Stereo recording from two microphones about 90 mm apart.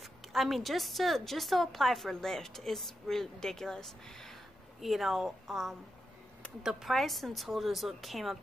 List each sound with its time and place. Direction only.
0.0 s a woman's voice: centre (ahead or behind)